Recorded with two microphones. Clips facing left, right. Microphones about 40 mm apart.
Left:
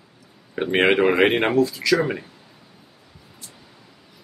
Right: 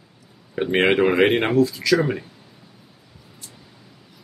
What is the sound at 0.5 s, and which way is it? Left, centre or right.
Speech, centre.